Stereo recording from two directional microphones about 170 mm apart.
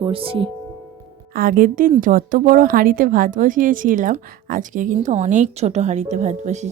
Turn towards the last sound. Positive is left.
turn(degrees=-40)  # may be behind; listen again after turning